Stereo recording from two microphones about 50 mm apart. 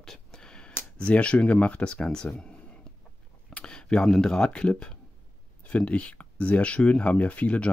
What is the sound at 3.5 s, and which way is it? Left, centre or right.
Speech, centre.